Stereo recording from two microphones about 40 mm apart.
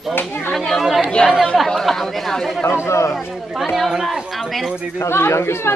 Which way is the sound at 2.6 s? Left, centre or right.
Left.